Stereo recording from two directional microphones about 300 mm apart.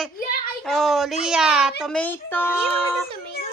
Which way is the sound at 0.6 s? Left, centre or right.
Centre.